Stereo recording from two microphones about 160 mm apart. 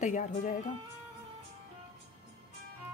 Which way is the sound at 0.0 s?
50° left (ahead or behind).